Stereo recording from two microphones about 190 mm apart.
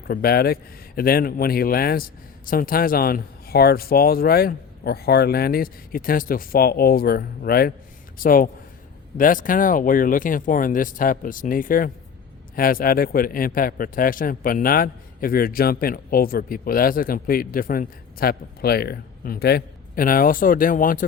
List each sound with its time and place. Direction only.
0.1 s a man's voice: 55° left (ahead or behind)